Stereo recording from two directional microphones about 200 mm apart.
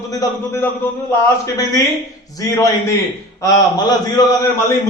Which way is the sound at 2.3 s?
15° left (ahead or behind).